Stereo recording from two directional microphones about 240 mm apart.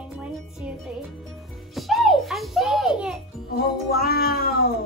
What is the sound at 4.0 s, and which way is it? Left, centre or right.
Music, left.